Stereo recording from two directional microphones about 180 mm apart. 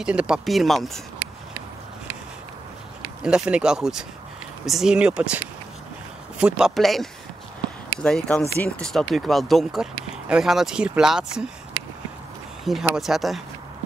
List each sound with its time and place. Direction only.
0.0 s speech: 5° right (ahead or behind)
3.2 s speech: 5° right (ahead or behind)
12.6 s speech: centre (ahead or behind)